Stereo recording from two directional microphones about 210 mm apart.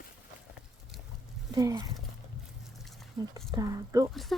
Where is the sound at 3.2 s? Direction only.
20° right (ahead or behind).